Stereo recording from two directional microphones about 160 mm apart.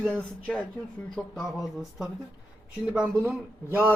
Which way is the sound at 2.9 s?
10° right (ahead or behind).